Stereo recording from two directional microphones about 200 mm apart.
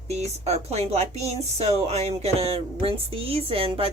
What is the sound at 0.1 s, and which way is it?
Speech, 30° right (ahead or behind).